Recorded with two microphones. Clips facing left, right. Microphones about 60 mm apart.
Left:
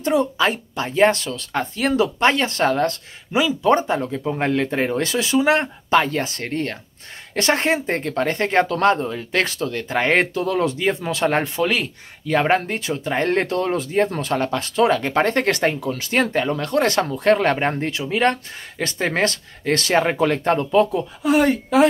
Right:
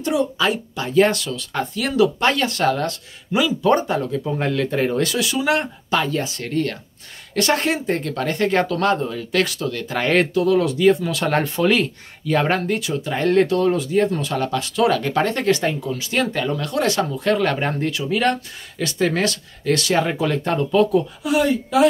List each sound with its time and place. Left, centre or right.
0.0 s speech: left
3.3 s speech: left
11.6 s speech: centre
12.3 s speech: left